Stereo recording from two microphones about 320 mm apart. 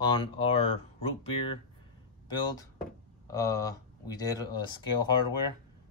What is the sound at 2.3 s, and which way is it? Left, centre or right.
Speech, centre.